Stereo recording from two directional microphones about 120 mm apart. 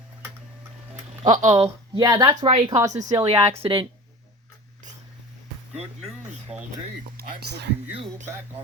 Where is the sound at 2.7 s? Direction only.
30° right (ahead or behind).